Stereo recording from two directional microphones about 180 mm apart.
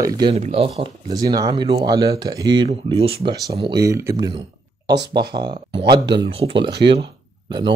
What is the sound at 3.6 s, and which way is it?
Speech, 20° right (ahead or behind).